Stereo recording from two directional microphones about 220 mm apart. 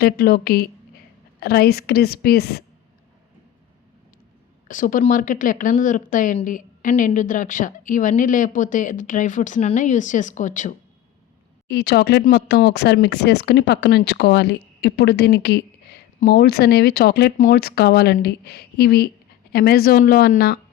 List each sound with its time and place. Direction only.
0.0 s speech: 45° left (ahead or behind)
4.7 s speech: 35° left (ahead or behind)
11.7 s speech: 50° left (ahead or behind)